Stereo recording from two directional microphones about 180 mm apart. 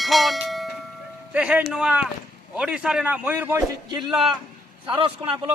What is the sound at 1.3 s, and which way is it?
A man's voice, 5° right (ahead or behind).